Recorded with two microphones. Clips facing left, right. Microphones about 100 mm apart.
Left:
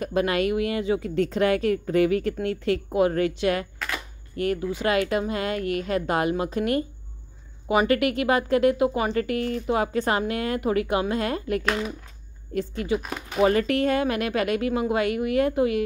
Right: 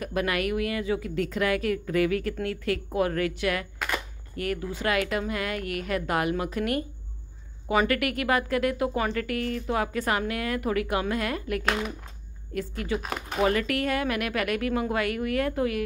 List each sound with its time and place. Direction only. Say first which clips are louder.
0.0 s speech: left 4 dB; 25° left (ahead or behind)